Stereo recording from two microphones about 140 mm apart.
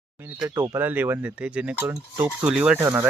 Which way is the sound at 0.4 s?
25° right (ahead or behind).